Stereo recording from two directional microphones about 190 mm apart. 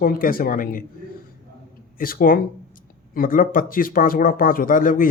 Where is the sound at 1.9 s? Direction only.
50° left (ahead or behind).